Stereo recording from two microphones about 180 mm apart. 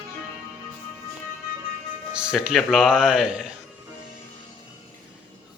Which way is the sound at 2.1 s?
5° right (ahead or behind).